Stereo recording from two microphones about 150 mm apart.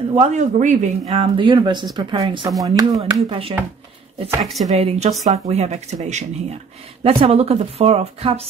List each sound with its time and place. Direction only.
0.1 s a woman's voice: 50° right (ahead or behind)
1.1 s speech: 35° right (ahead or behind)
2.6 s speech: 25° right (ahead or behind)
3.0 s speech: 40° right (ahead or behind)
4.4 s speech: centre (ahead or behind)
4.6 s a woman's voice: 45° right (ahead or behind)
7.0 s a woman's voice: 40° right (ahead or behind)